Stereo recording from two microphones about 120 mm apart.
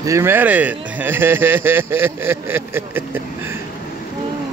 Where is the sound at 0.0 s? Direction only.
25° right (ahead or behind).